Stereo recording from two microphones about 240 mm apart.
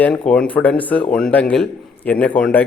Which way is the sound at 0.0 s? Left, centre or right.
Centre.